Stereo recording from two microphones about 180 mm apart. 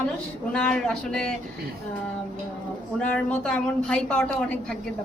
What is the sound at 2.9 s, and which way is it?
A woman's voice, 5° left (ahead or behind).